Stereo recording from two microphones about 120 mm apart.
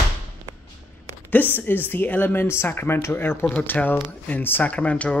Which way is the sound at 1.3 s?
15° left (ahead or behind).